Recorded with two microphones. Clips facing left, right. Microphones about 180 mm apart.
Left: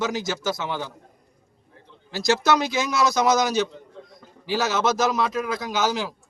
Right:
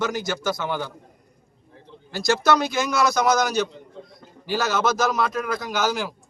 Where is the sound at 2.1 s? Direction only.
5° left (ahead or behind).